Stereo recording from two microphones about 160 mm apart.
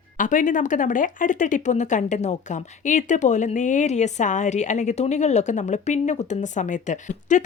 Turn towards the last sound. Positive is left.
turn(degrees=50)  # may be behind; listen again after turning